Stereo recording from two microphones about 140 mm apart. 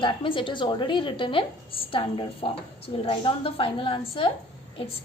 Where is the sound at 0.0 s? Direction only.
35° left (ahead or behind).